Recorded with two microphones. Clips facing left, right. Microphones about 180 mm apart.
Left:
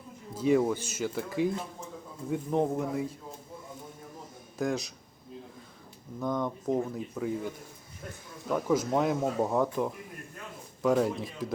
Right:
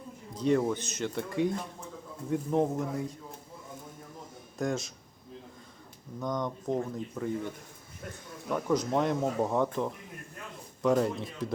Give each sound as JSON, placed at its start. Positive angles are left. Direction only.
{"t": 0.3, "sound": "speech", "side_deg": 5}
{"t": 4.5, "sound": "a man's voice", "side_deg": 0}
{"t": 6.1, "sound": "speech", "side_deg": 5}